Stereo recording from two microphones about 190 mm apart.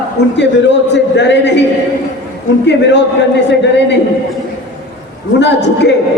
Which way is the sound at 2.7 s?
65° left (ahead or behind).